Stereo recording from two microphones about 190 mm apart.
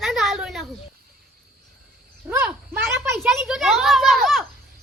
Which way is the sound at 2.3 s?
10° right (ahead or behind).